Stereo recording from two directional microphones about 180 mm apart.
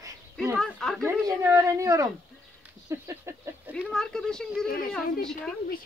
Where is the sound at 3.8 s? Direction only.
5° left (ahead or behind).